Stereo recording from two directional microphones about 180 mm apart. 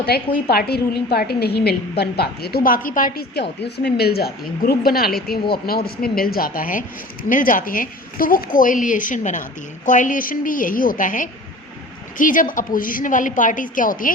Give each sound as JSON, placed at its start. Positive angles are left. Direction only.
{"t": 0.1, "sound": "a woman's voice", "side_deg": 60}